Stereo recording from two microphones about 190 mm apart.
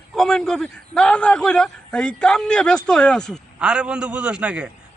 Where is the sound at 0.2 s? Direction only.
5° left (ahead or behind).